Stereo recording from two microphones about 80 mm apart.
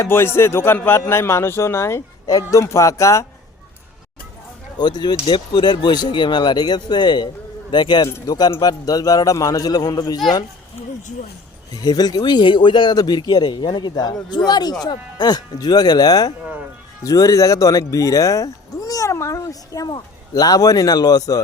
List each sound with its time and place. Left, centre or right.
0.0 s speech: left
2.2 s speech: left
4.8 s speech: left
8.9 s a man's voice: left
11.7 s a man's voice: left